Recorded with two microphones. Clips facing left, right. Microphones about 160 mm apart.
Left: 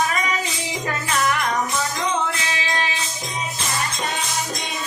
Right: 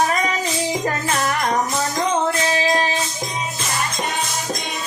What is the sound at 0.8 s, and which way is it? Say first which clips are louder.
Music: right 1 dB; 40° right (ahead or behind).